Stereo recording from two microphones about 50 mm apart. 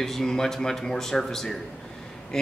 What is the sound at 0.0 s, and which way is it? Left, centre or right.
A man's voice, centre.